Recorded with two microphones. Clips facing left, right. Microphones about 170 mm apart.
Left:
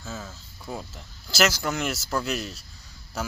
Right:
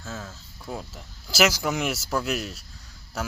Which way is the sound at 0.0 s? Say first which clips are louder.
Even; centre (ahead or behind).